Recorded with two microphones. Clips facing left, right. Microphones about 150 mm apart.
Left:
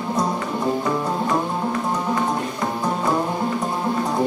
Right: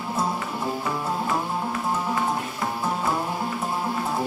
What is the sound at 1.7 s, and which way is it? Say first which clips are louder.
Music: left 2 dB; 5° right (ahead or behind).